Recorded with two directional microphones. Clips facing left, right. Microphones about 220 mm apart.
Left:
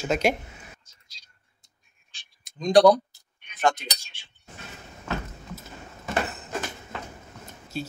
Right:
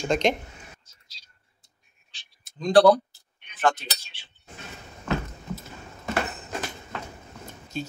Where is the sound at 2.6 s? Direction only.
15° left (ahead or behind).